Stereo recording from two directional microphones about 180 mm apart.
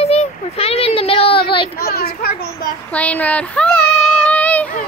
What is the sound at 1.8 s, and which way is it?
Children playing, 55° left (ahead or behind).